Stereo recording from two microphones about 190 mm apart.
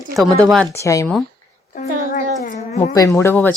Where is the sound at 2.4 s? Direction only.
40° left (ahead or behind).